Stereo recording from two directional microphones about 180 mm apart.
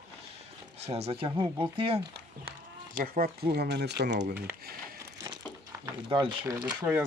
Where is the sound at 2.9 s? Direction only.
50° right (ahead or behind); by 4.1 s 70° right (ahead or behind).